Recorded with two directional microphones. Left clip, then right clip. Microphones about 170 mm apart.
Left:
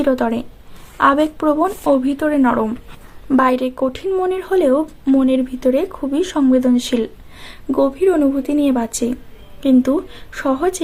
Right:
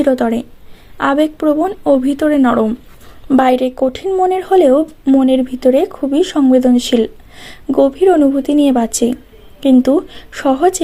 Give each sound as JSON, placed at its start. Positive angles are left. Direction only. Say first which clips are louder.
{"t": 0.0, "sound": "a woman's voice", "louder": "right 4 dB", "side_deg": -25}